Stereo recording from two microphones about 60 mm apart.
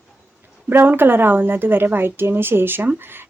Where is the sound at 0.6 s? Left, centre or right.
Right.